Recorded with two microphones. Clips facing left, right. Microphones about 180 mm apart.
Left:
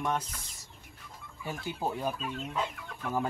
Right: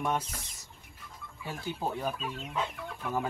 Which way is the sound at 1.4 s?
10° left (ahead or behind).